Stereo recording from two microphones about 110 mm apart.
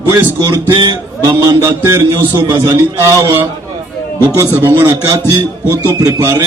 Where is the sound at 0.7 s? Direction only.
45° right (ahead or behind).